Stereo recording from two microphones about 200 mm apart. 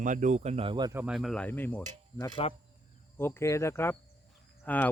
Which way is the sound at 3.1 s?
10° left (ahead or behind).